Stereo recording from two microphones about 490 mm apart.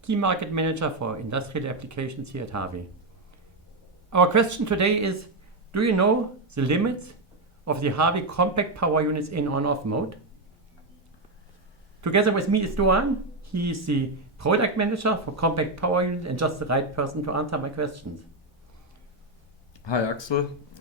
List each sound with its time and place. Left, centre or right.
0.0 s speech: right
4.1 s speech: right
11.9 s speech: right
19.8 s speech: left